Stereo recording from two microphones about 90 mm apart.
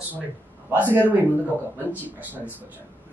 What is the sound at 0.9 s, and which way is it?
Speech, 25° right (ahead or behind).